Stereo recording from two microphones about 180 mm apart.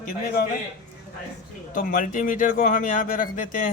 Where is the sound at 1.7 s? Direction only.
50° left (ahead or behind).